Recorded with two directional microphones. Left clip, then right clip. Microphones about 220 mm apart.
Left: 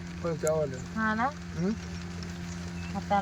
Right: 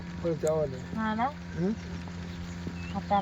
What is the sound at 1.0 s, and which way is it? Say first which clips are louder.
Speech: left 2 dB; 10° left (ahead or behind).